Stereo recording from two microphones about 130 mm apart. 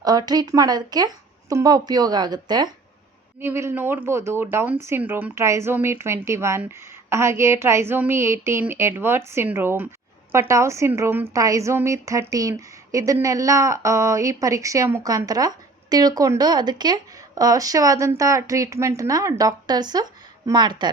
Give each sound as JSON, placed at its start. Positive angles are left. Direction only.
{"t": 0.0, "sound": "a woman's voice", "side_deg": -30}
{"t": 3.4, "sound": "a woman's voice", "side_deg": -20}